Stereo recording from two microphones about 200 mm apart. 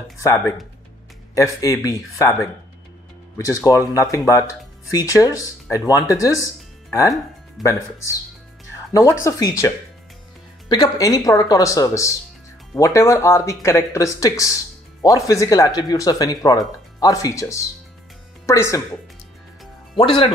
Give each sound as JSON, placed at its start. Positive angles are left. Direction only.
{"t": 0.2, "sound": "speech", "side_deg": 15}
{"t": 3.3, "sound": "speech", "side_deg": 15}
{"t": 7.6, "sound": "speech", "side_deg": 0}
{"t": 8.9, "sound": "speech", "side_deg": 15}
{"t": 20.0, "sound": "speech", "side_deg": 25}